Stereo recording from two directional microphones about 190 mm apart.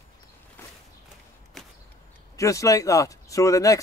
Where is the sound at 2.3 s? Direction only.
15° left (ahead or behind).